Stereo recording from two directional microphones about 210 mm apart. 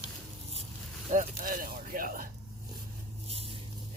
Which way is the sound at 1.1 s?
40° right (ahead or behind).